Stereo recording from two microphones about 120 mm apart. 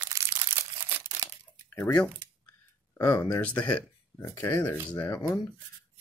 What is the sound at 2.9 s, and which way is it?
Speech, 25° left (ahead or behind).